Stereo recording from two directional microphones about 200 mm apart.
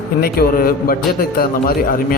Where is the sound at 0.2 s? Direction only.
50° left (ahead or behind).